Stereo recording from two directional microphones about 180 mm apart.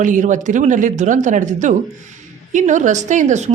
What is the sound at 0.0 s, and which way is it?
A woman's voice, 45° right (ahead or behind).